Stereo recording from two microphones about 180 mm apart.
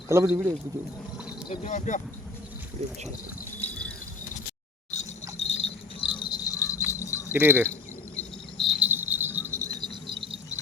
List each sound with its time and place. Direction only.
0.1 s speech: 15° right (ahead or behind)
1.6 s speech: 45° left (ahead or behind)
3.6 s a sound: 10° left (ahead or behind)
5.4 s jingle bell: 35° left (ahead or behind); by 7.3 s 15° left (ahead or behind)
7.3 s speech: 10° right (ahead or behind)
7.7 s cricket: 5° left (ahead or behind)
8.8 s cricket: 10° right (ahead or behind); by 10.4 s 25° right (ahead or behind)